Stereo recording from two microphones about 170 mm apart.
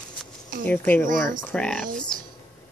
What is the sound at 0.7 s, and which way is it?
Speech, 10° left (ahead or behind).